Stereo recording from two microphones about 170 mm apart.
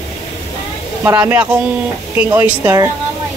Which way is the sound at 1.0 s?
10° right (ahead or behind).